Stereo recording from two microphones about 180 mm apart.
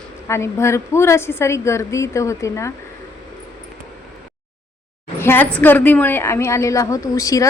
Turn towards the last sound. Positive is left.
turn(degrees=20)  # may be behind; listen again after turning